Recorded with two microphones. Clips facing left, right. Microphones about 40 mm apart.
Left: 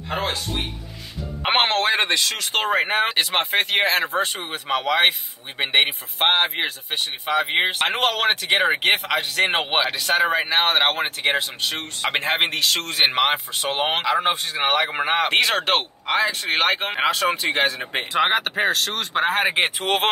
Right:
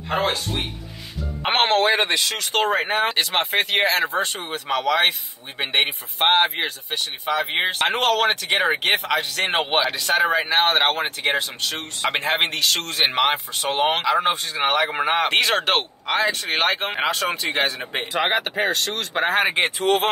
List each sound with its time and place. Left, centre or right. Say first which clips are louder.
0.1 s a sound: right 3 dB; centre
1.4 s speech: right 1 dB; centre
2.7 s speech: left 1 dB; centre
6.9 s speech: left 1 dB; centre
19.8 s speech: right 2 dB; left